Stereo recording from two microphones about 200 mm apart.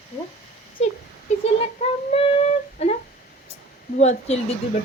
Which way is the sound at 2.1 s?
30° left (ahead or behind).